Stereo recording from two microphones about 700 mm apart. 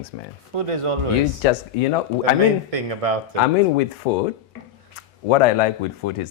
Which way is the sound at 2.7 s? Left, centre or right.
Right.